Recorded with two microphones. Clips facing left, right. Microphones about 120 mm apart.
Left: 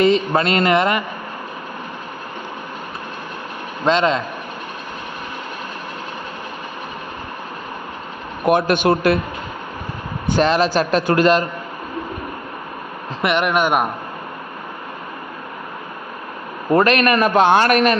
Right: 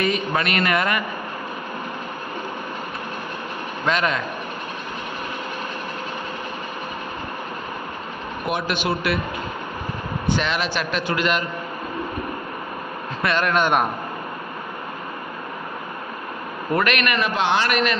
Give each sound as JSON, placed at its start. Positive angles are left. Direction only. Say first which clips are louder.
{"t": 0.0, "sound": "speech", "louder": "left 7 dB", "side_deg": 30}
{"t": 3.8, "sound": "speech", "louder": "left 6 dB", "side_deg": 25}
{"t": 8.4, "sound": "a man's voice", "louder": "left 9 dB", "side_deg": 50}
{"t": 10.2, "sound": "a man's voice", "louder": "left 8 dB", "side_deg": 40}
{"t": 13.2, "sound": "speech", "louder": "left 3 dB", "side_deg": 15}
{"t": 16.7, "sound": "a man's voice", "louder": "left 7 dB", "side_deg": 35}